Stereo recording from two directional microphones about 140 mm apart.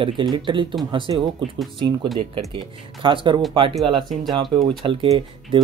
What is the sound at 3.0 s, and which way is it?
Speech, 35° right (ahead or behind).